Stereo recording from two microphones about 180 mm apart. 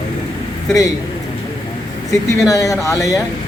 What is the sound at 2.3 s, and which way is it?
Speech, 20° left (ahead or behind).